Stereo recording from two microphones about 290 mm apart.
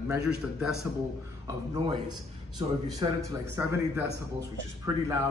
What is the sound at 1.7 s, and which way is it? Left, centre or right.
A man's voice, centre.